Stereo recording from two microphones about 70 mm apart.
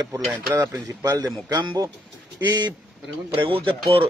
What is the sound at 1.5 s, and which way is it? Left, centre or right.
Speech, right.